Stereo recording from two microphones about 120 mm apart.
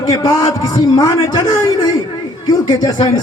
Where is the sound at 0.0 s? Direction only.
30° left (ahead or behind).